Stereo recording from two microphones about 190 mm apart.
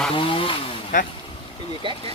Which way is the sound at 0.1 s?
30° left (ahead or behind).